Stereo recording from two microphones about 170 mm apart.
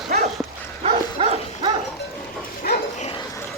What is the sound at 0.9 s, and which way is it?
Dog, 35° right (ahead or behind).